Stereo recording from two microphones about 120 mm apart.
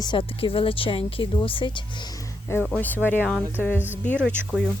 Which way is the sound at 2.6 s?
10° left (ahead or behind).